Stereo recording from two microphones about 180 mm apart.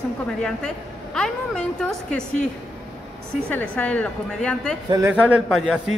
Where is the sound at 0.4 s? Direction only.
5° left (ahead or behind).